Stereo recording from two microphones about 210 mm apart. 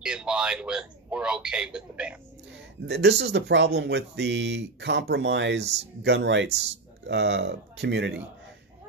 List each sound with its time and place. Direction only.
0.0 s a man's voice: 5° right (ahead or behind)
2.9 s speech: 55° right (ahead or behind)